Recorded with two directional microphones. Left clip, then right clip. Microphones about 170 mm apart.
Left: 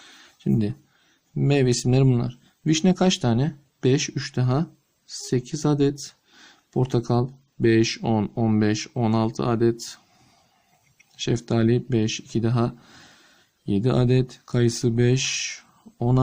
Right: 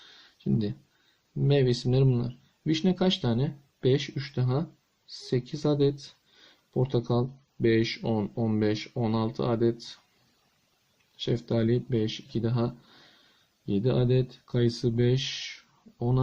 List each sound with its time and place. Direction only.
0.0 s a sound: 35° left (ahead or behind)
1.5 s speech: 40° left (ahead or behind)
11.2 s speech: 45° left (ahead or behind)